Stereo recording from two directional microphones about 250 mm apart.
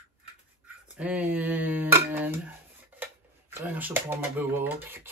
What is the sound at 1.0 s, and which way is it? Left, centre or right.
Speech, centre.